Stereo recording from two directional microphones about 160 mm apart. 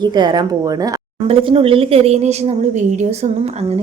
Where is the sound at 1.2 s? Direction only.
35° right (ahead or behind).